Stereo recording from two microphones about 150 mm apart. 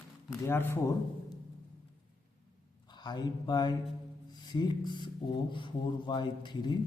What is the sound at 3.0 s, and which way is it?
A man's voice, 30° left (ahead or behind).